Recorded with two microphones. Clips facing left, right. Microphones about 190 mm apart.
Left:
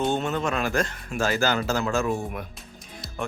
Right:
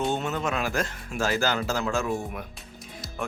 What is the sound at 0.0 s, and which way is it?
Speech, centre (ahead or behind).